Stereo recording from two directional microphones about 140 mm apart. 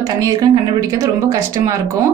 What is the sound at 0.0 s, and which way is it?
A woman's voice, 25° right (ahead or behind).